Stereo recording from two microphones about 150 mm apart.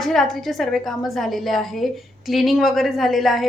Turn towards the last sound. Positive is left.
turn(degrees=0)  # may be behind; listen again after turning